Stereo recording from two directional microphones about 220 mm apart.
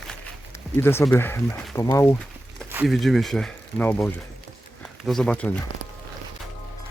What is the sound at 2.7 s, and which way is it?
Speech, centre (ahead or behind).